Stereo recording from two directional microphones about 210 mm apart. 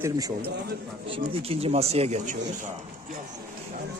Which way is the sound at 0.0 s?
15° right (ahead or behind).